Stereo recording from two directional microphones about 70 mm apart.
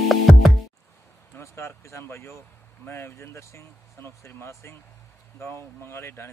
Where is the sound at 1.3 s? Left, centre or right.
Left.